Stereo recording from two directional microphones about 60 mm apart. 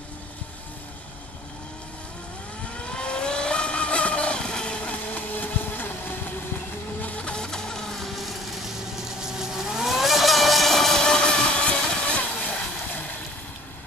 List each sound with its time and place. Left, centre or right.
2.8 s vehicle: centre; by 6.3 s left
7.0 s printer: left